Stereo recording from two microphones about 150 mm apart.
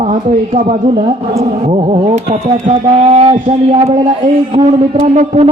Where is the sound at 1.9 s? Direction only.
45° right (ahead or behind).